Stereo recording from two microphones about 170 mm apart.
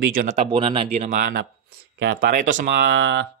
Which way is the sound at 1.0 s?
50° right (ahead or behind).